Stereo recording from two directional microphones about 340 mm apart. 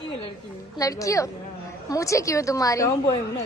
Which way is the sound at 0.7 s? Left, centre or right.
Centre.